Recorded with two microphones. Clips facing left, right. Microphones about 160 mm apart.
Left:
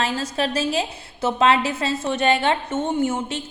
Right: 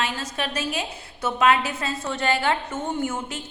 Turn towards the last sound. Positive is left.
turn(degrees=20)  # may be behind; listen again after turning